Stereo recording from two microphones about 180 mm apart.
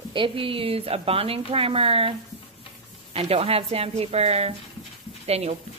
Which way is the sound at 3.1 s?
35° right (ahead or behind).